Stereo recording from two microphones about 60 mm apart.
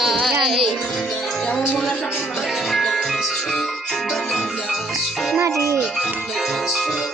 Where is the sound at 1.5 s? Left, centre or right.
Centre.